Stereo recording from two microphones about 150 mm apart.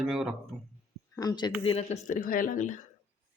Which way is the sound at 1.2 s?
25° left (ahead or behind).